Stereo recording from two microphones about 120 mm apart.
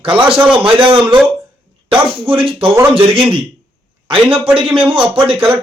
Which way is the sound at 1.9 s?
50° right (ahead or behind).